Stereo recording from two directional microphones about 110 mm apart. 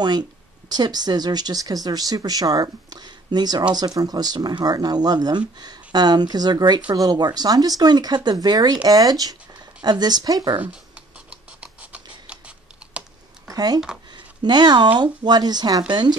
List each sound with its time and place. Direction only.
0.7 s speech: 40° right (ahead or behind)
10.6 s scratch: 10° right (ahead or behind)
13.5 s a sound: 35° right (ahead or behind)
14.1 s speech: 40° right (ahead or behind)